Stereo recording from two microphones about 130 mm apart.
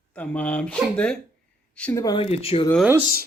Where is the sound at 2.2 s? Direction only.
50° left (ahead or behind).